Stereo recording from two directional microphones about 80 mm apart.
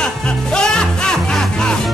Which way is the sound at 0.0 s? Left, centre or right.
Centre.